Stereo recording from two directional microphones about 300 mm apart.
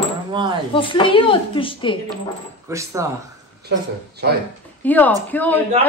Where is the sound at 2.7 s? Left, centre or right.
Centre.